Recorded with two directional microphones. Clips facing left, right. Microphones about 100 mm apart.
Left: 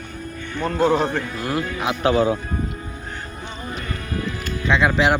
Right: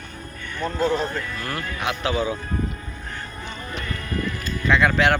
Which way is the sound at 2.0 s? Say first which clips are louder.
Left 7 dB; 55° left (ahead or behind).